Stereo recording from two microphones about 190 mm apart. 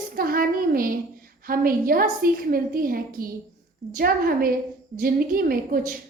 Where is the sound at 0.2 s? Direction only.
50° right (ahead or behind).